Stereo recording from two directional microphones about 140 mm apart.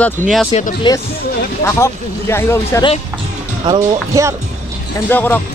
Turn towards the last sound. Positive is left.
turn(degrees=15)  # may be behind; listen again after turning